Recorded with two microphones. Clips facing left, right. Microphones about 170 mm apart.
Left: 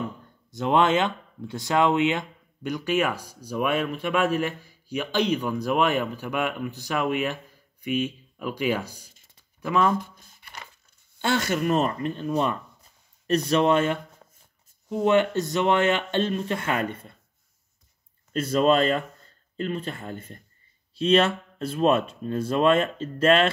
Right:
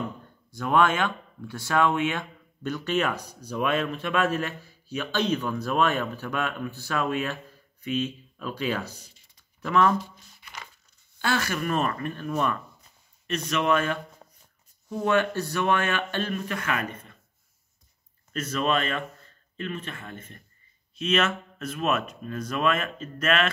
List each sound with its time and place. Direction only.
0.5 s speech: 20° left (ahead or behind)
9.9 s speech: 50° left (ahead or behind)
11.1 s speech: 20° left (ahead or behind)
13.3 s speech: 35° left (ahead or behind)
18.3 s speech: 30° left (ahead or behind)